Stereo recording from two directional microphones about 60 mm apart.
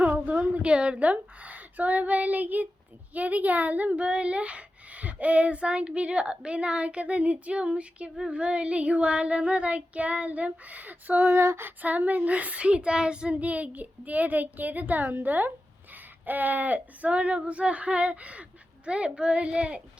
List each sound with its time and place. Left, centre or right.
0.0 s a sound: right
3.2 s speech: right
11.3 s female singing: right
11.8 s speech: right